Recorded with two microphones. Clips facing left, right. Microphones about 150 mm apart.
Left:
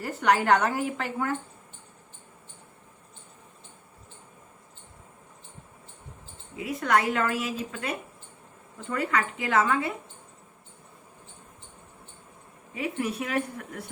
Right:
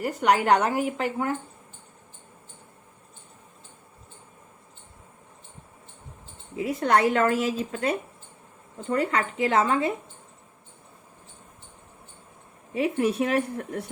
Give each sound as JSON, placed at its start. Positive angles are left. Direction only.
{"t": 0.0, "sound": "a woman's voice", "side_deg": -15}
{"t": 6.6, "sound": "a woman's voice", "side_deg": -30}
{"t": 8.9, "sound": "a woman's voice", "side_deg": -30}
{"t": 12.7, "sound": "a woman's voice", "side_deg": -30}